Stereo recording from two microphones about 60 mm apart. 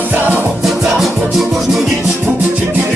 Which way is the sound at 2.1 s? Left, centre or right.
Right.